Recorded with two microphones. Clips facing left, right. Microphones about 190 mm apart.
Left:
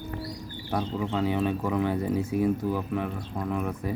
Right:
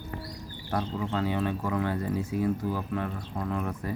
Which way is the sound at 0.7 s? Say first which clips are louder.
Left 2 dB; 15° left (ahead or behind).